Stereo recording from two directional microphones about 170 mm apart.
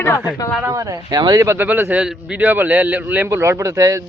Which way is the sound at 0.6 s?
20° right (ahead or behind).